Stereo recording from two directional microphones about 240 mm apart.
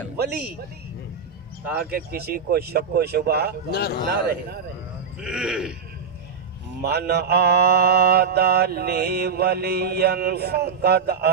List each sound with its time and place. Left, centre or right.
1.6 s speech: centre
1.9 s mantra: right
3.7 s speech: left
5.2 s speech: centre
6.8 s mantra: right